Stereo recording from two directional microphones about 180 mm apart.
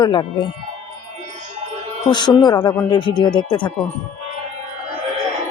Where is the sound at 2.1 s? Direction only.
25° left (ahead or behind).